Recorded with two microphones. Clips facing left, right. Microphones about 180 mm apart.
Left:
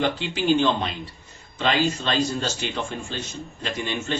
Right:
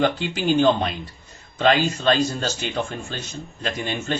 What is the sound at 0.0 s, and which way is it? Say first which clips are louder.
Speech: right 2 dB; 45° right (ahead or behind).